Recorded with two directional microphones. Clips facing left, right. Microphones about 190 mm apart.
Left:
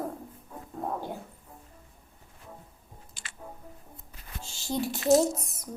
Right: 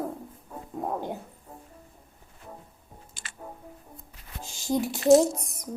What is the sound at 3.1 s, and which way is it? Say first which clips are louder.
Music: right 1 dB; 50° right (ahead or behind).